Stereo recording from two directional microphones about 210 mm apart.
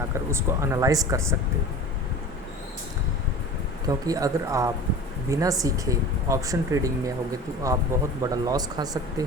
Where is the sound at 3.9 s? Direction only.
15° right (ahead or behind).